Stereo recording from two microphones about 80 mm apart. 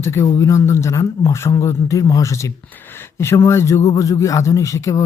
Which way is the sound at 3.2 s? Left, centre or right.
Left.